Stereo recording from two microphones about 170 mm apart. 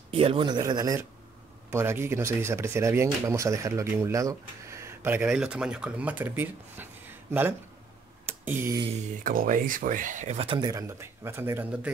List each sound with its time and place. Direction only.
0.1 s a man's voice: 35° right (ahead or behind); by 8.8 s 15° right (ahead or behind)
8.9 s speech: 55° right (ahead or behind); by 10.6 s 35° right (ahead or behind)
10.6 s speech: 20° right (ahead or behind)